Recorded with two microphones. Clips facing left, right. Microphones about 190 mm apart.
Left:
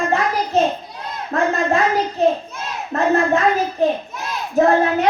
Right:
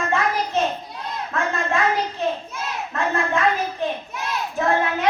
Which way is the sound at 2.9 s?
40° left (ahead or behind).